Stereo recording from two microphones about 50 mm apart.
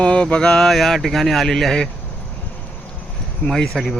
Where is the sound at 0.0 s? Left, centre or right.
Left.